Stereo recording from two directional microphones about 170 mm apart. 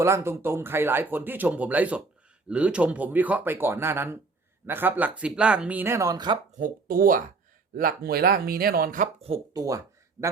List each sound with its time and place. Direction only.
0.0 s speech: 15° right (ahead or behind)
6.6 s speech: 55° right (ahead or behind)
9.5 s a sound: 20° right (ahead or behind)